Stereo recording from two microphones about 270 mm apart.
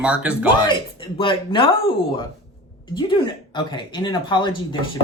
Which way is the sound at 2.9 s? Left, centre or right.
Centre.